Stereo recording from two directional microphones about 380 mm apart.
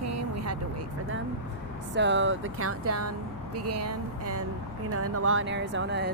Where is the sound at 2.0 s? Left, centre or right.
Right.